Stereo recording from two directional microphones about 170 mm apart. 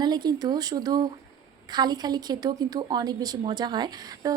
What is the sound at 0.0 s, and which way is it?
A woman's voice, 25° right (ahead or behind).